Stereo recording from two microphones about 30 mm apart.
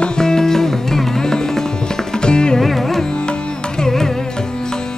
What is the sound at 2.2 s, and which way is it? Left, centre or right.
Music, left.